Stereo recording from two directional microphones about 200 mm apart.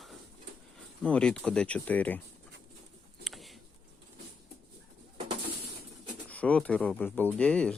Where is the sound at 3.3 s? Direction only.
Centre (ahead or behind).